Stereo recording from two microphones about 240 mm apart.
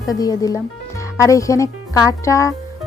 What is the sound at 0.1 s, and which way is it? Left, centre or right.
Speech, centre.